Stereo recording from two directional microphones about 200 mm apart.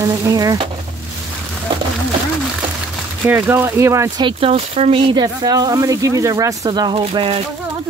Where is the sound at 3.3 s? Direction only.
10° right (ahead or behind).